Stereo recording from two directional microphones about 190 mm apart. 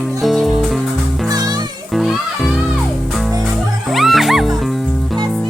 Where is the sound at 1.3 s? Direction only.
20° right (ahead or behind).